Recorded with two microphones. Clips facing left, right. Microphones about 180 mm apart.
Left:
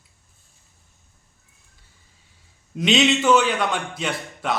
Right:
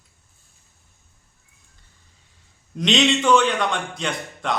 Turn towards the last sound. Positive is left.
turn(degrees=5)  # may be behind; listen again after turning